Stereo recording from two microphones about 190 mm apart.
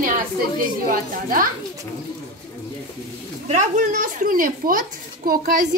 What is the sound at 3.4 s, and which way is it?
A woman's voice, 40° right (ahead or behind).